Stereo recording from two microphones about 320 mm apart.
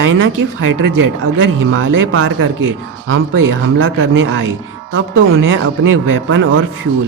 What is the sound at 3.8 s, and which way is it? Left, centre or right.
Speech, right.